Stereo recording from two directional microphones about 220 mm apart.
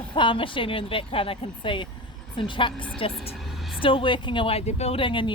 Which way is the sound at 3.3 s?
Centre (ahead or behind).